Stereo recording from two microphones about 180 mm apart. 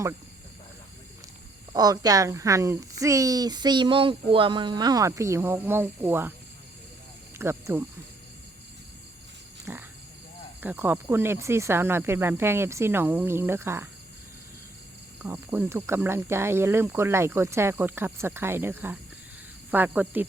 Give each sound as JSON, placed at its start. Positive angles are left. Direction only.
{"t": 1.7, "sound": "speech", "side_deg": -20}
{"t": 7.3, "sound": "speech", "side_deg": -15}
{"t": 9.7, "sound": "speech", "side_deg": -10}
{"t": 15.2, "sound": "speech", "side_deg": -10}